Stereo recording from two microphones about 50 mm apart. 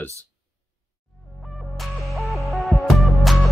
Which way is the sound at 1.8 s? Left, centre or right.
Centre.